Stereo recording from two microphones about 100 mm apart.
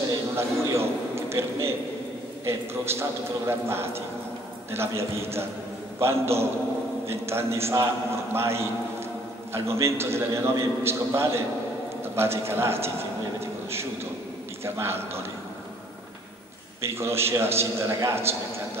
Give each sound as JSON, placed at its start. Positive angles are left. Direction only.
{"t": 0.4, "sound": "a man's voice", "side_deg": -25}
{"t": 14.6, "sound": "a man's voice", "side_deg": -25}
{"t": 16.8, "sound": "a man's voice", "side_deg": -25}